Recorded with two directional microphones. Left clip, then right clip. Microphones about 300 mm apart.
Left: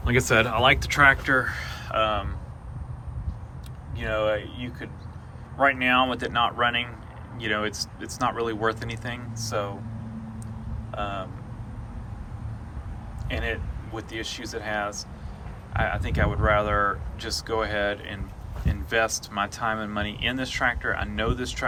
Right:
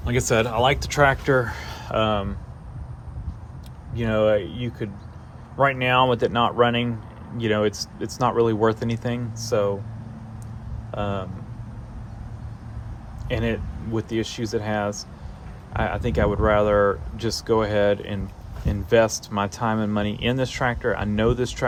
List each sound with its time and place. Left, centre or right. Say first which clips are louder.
0.0 s speech: even; centre; by 2.3 s right
3.9 s speech: right 5 dB; right
10.9 s speech: right 3 dB; right
13.9 s speech: right 6 dB; right